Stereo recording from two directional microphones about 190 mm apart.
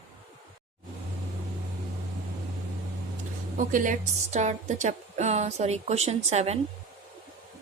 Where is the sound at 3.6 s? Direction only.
45° right (ahead or behind).